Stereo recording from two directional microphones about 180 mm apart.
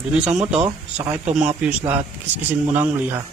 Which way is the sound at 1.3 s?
5° right (ahead or behind).